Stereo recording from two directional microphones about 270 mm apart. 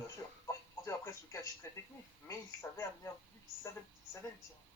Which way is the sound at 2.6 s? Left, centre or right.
Centre.